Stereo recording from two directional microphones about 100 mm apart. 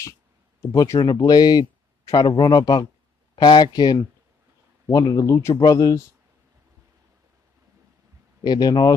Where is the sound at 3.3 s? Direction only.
50° left (ahead or behind).